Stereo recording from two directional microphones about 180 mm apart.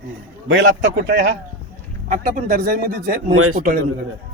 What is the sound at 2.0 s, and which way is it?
Speech, 50° right (ahead or behind).